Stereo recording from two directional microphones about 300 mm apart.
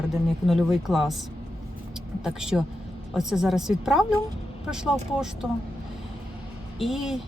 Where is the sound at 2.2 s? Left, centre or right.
Centre.